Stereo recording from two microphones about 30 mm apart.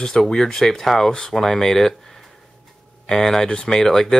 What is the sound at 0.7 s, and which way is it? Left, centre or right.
Speech, centre.